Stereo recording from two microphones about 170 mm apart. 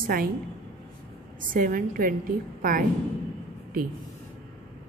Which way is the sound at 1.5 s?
55° right (ahead or behind).